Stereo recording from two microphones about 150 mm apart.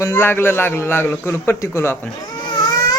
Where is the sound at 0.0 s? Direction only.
15° left (ahead or behind).